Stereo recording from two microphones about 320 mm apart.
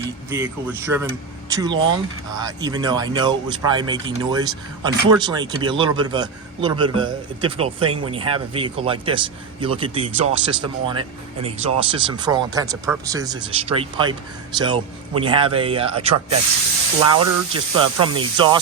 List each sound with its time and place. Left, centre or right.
0.3 s speech: centre
17.5 s speech: centre